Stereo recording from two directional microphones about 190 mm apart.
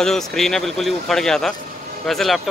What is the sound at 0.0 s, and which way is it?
Speech, centre (ahead or behind).